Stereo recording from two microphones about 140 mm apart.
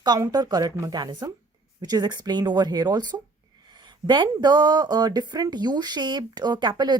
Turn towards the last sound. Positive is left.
turn(degrees=-30)  # may be behind; listen again after turning